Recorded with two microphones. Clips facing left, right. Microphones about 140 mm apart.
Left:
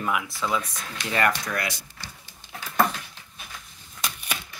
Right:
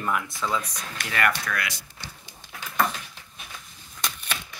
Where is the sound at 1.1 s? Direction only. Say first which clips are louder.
Left 2 dB; 25° left (ahead or behind).